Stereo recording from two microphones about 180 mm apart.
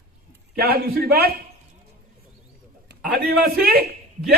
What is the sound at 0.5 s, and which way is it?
Speech, 60° right (ahead or behind).